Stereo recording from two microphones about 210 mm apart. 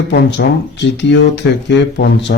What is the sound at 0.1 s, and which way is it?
Speech, 55° left (ahead or behind).